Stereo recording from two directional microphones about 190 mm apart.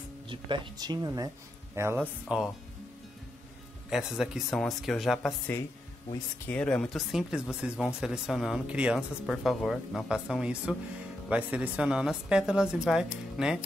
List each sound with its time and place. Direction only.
0.3 s speech: 25° right (ahead or behind); by 2.5 s 5° right (ahead or behind)
3.9 s speech: 5° right (ahead or behind)
6.4 s speech: 5° left (ahead or behind)